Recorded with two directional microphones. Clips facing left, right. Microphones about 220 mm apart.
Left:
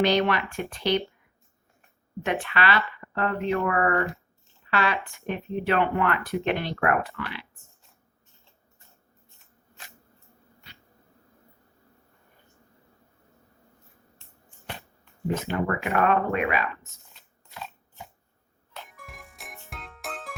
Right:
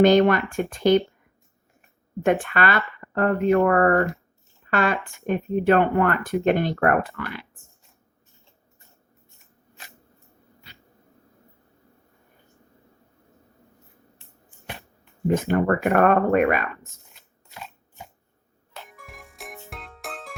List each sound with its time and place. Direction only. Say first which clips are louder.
0.0 s speech: right 7 dB; 45° right (ahead or behind)
2.2 s speech: right 5 dB; 50° right (ahead or behind)
15.4 s speech: right 8 dB; 45° right (ahead or behind)
18.7 s music: right 1 dB; centre (ahead or behind)